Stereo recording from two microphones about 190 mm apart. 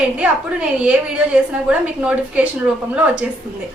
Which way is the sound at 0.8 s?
5° right (ahead or behind).